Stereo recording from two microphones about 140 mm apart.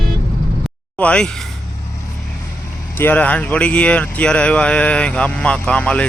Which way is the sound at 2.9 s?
15° left (ahead or behind).